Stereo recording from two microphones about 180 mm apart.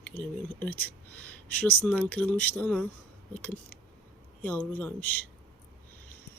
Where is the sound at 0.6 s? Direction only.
10° left (ahead or behind).